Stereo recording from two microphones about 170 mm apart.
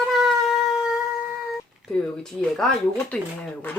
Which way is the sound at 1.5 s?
Centre (ahead or behind).